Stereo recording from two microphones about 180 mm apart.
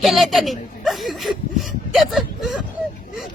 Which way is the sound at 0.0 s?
Centre (ahead or behind).